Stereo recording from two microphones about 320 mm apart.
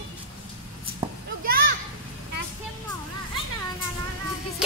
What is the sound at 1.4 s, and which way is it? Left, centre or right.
Children playing, right.